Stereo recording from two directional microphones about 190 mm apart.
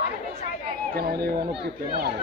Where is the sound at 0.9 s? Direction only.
55° right (ahead or behind).